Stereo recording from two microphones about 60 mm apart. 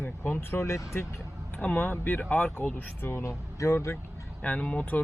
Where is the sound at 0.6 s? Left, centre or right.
Left.